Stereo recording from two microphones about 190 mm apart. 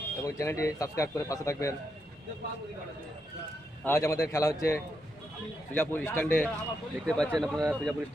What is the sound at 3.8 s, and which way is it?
A man's voice, 15° left (ahead or behind).